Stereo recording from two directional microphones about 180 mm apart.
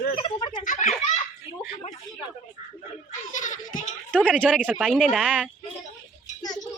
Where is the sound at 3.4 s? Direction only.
45° left (ahead or behind).